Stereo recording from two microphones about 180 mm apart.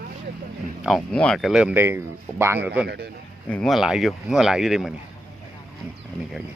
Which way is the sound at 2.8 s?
65° right (ahead or behind).